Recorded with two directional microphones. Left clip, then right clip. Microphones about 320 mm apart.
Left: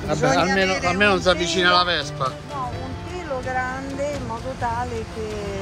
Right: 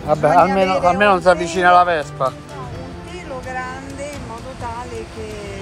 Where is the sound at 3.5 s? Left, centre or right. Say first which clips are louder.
Left 2 dB; centre.